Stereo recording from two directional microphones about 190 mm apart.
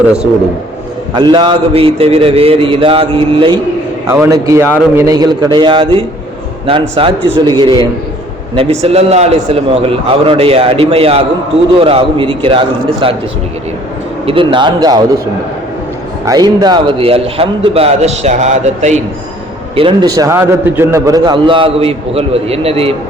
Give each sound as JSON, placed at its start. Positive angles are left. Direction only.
{"t": 1.1, "sound": "a man's voice", "side_deg": -25}
{"t": 4.1, "sound": "a man's voice", "side_deg": -15}
{"t": 14.3, "sound": "a man's voice", "side_deg": -25}
{"t": 16.2, "sound": "a man's voice", "side_deg": -20}
{"t": 19.7, "sound": "a man's voice", "side_deg": -25}